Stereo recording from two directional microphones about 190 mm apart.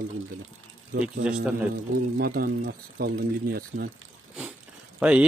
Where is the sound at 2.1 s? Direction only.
50° right (ahead or behind).